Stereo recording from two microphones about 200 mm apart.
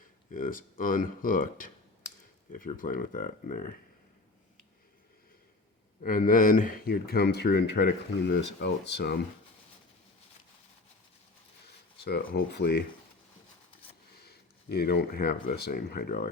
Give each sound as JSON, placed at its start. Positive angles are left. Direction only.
{"t": 0.3, "sound": "speech", "side_deg": 40}
{"t": 6.0, "sound": "speech", "side_deg": 40}
{"t": 12.3, "sound": "speech", "side_deg": 55}
{"t": 14.3, "sound": "speech", "side_deg": 50}